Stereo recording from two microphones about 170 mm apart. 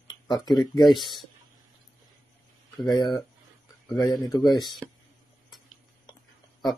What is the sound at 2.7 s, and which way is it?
Speech, 25° left (ahead or behind).